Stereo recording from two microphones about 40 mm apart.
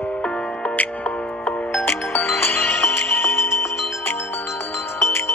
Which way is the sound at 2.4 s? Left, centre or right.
Left.